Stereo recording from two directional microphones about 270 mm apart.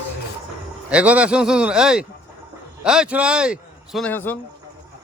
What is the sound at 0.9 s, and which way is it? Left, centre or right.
A man's voice, centre.